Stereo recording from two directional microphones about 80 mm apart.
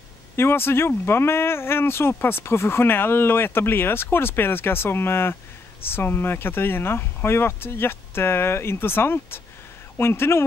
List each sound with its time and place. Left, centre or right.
0.4 s speech: left